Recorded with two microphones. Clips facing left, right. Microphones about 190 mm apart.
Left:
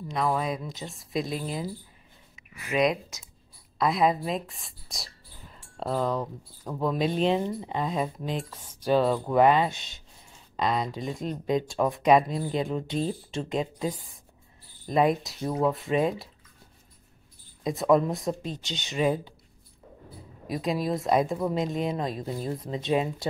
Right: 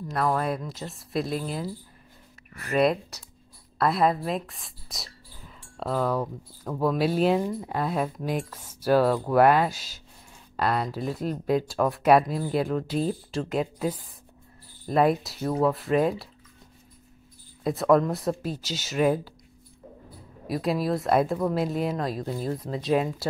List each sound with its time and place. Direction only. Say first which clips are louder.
0.1 s speech: right 1 dB; centre (ahead or behind)
17.7 s speech: right 1 dB; centre (ahead or behind)
20.4 s speech: right 2 dB; centre (ahead or behind)